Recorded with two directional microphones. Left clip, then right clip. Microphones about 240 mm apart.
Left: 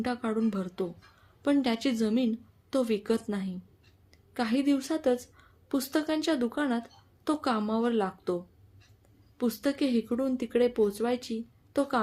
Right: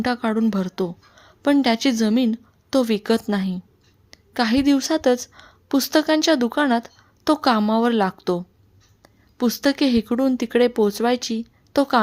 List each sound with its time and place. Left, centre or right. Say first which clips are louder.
0.0 s a woman's voice: right 9 dB; right
9.4 s speech: right 9 dB; right